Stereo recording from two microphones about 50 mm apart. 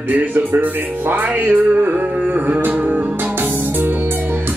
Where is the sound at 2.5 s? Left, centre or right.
Right.